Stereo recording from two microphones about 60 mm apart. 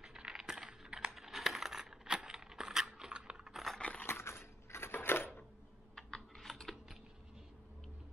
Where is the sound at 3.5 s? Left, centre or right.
Centre.